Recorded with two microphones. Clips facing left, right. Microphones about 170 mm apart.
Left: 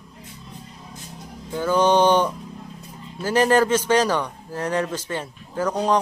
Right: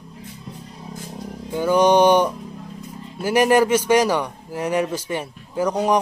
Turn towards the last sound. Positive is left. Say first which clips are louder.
# right 2 dB
turn(degrees=-10)  # may be behind; listen again after turning